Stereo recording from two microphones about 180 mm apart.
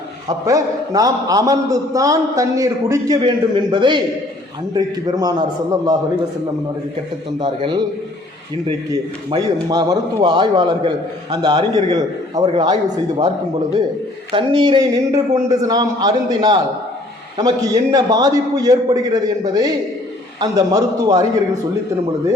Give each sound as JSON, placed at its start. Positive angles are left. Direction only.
{"t": 0.4, "sound": "a man's voice", "side_deg": -20}
{"t": 7.3, "sound": "a man's voice", "side_deg": -25}
{"t": 8.9, "sound": "a man's voice", "side_deg": -20}
{"t": 12.7, "sound": "speech", "side_deg": -40}
{"t": 14.3, "sound": "a man's voice", "side_deg": -30}
{"t": 17.9, "sound": "a man's voice", "side_deg": -20}